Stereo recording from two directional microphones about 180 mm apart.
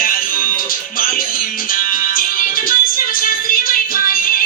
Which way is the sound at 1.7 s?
50° left (ahead or behind).